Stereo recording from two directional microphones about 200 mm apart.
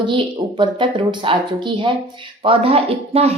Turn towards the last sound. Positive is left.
turn(degrees=-30)  # may be behind; listen again after turning